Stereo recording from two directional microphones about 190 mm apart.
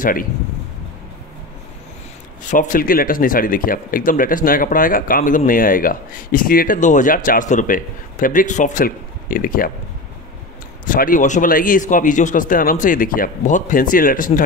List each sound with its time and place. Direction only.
0.0 s speech: 45° left (ahead or behind)
2.4 s speech: 45° left (ahead or behind)
10.9 s speech: 45° left (ahead or behind)